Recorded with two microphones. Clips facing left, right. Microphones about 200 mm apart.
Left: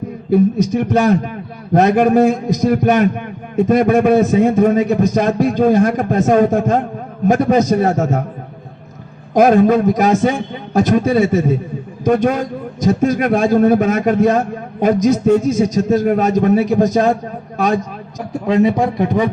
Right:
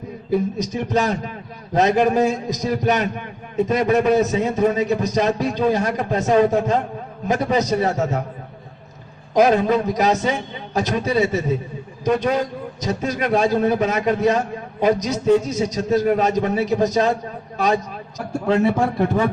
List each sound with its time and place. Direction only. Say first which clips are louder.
0.3 s a man's voice: left 8 dB; 55° left (ahead or behind)
9.3 s a man's voice: left 5 dB; 50° left (ahead or behind)
18.3 s speech: left 4 dB; 15° left (ahead or behind)